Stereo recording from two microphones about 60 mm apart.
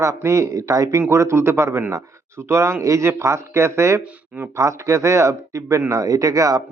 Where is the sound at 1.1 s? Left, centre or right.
Right.